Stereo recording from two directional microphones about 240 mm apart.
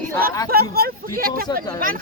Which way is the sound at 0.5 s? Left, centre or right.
Right.